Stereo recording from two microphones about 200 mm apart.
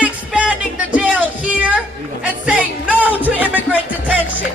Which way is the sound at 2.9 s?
10° left (ahead or behind).